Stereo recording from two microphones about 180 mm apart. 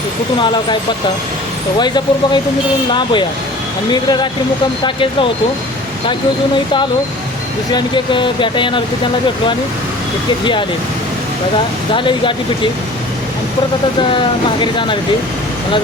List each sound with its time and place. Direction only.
1.8 s speech: 25° left (ahead or behind)
7.7 s speech: 25° left (ahead or behind)
10.4 s speech: 25° left (ahead or behind)
11.9 s speech: 25° left (ahead or behind)
14.1 s speech: 25° left (ahead or behind)